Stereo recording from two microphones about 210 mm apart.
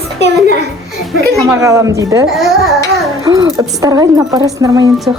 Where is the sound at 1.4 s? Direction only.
15° right (ahead or behind).